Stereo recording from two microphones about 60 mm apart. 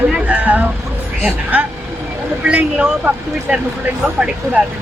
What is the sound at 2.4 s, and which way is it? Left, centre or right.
Speech, centre.